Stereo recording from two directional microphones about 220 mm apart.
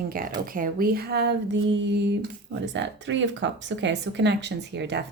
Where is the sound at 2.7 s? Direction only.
55° right (ahead or behind).